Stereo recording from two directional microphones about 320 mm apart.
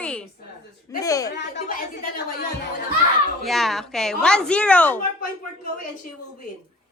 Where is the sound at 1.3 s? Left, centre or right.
Left.